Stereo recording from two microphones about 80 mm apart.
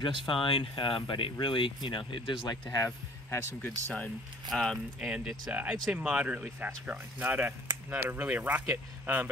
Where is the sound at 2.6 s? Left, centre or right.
Left.